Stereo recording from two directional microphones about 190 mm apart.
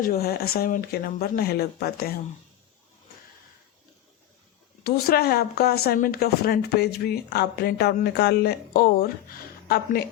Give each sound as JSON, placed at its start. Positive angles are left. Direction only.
{"t": 0.0, "sound": "speech", "side_deg": 55}
{"t": 4.8, "sound": "speech", "side_deg": 55}